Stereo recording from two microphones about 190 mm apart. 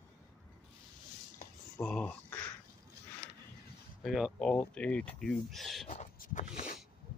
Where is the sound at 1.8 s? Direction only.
5° left (ahead or behind).